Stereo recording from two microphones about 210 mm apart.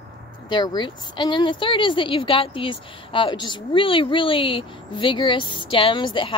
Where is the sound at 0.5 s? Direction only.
20° left (ahead or behind).